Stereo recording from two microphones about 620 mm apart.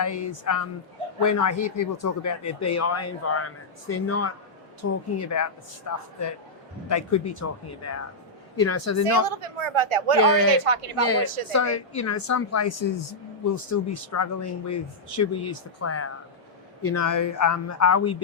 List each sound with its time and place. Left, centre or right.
0.0 s speech: left
9.2 s a woman's voice: right
11.5 s speech: left